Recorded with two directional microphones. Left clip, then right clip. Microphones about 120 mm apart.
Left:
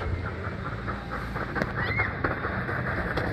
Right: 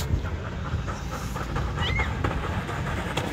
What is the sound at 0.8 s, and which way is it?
Pant, 5° right (ahead or behind).